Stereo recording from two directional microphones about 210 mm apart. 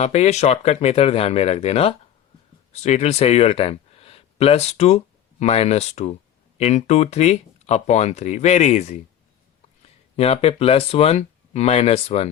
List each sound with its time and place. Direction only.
0.0 s speech: 30° left (ahead or behind)
10.2 s speech: 30° left (ahead or behind)